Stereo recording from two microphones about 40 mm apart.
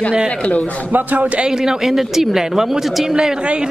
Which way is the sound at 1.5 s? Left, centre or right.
Centre.